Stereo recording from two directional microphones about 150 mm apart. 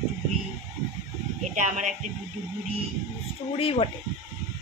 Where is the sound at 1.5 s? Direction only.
55° right (ahead or behind).